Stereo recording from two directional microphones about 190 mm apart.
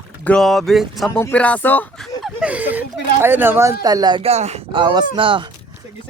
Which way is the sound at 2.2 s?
Centre (ahead or behind).